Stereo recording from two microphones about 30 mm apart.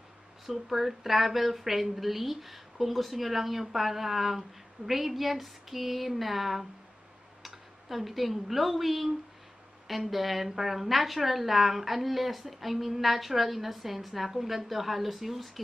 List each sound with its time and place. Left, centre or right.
0.5 s a woman's voice: centre